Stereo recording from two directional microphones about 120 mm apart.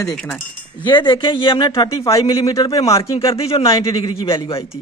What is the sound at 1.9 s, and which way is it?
A man's voice, 25° left (ahead or behind).